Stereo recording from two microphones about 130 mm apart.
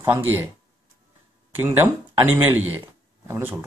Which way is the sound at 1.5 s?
15° right (ahead or behind).